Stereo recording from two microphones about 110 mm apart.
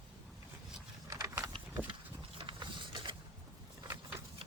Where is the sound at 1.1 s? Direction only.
30° right (ahead or behind).